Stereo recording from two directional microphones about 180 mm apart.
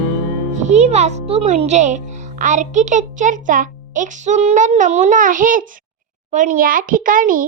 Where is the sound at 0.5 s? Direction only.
40° right (ahead or behind).